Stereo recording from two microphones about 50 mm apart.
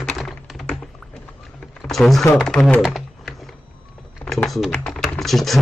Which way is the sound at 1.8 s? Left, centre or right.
Centre.